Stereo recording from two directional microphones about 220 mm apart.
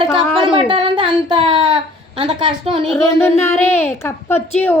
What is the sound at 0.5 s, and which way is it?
Speech, 20° right (ahead or behind).